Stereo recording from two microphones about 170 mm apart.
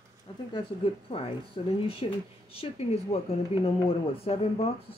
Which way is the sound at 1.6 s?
30° left (ahead or behind).